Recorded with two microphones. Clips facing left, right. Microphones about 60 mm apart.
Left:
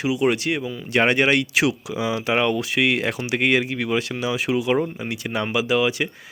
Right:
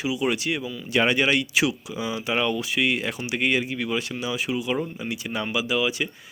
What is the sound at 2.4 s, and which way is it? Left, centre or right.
Speech, left.